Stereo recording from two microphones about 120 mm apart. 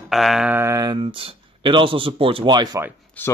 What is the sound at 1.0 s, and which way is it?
Speech, 50° right (ahead or behind).